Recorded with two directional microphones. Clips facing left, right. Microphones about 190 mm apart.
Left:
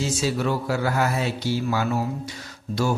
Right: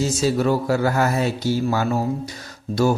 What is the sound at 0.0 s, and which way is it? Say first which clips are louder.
Speech: right 5 dB; 40° right (ahead or behind).